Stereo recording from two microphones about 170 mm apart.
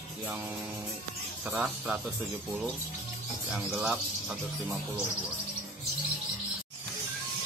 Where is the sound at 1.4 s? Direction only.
5° right (ahead or behind).